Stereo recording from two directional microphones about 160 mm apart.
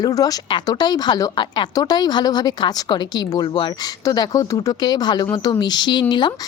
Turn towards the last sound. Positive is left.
turn(degrees=30)  # may be behind; listen again after turning